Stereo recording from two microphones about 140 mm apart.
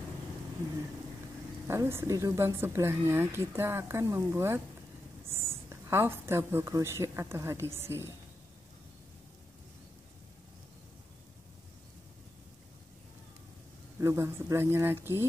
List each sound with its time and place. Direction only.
1.7 s a woman's voice: 20° right (ahead or behind)
13.9 s speech: 20° right (ahead or behind)